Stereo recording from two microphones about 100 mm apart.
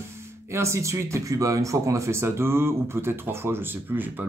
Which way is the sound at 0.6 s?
30° right (ahead or behind).